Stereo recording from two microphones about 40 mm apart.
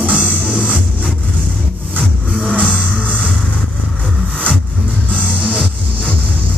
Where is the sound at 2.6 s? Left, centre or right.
Left.